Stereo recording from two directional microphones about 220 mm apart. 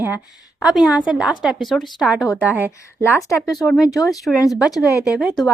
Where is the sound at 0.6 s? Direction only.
Centre (ahead or behind).